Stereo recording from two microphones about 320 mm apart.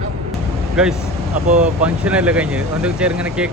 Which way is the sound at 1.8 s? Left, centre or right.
Centre.